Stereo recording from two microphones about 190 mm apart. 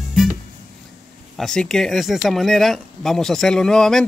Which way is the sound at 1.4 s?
5° left (ahead or behind).